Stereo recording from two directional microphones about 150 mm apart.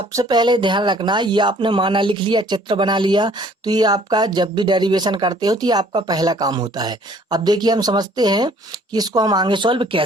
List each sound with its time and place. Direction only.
0.1 s speech: 25° right (ahead or behind)